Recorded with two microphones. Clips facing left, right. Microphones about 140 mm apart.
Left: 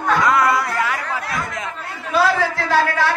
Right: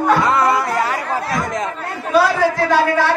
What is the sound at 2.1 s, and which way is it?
Speech, 15° right (ahead or behind).